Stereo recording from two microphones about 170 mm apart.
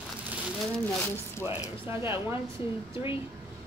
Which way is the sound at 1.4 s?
15° right (ahead or behind).